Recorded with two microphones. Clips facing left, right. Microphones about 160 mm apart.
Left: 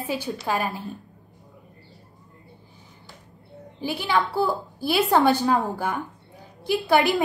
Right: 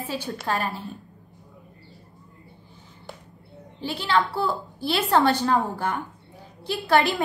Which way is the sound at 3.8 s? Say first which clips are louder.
Even; 15° left (ahead or behind).